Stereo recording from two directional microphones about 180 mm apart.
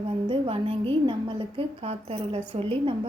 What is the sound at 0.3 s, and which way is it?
A woman's voice, 30° right (ahead or behind).